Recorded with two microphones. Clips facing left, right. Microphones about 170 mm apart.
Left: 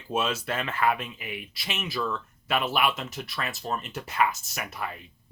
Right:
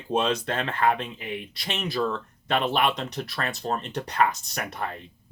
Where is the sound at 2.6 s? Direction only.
5° left (ahead or behind).